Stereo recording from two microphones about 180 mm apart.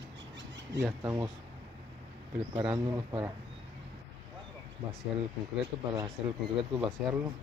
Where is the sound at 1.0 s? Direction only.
15° right (ahead or behind).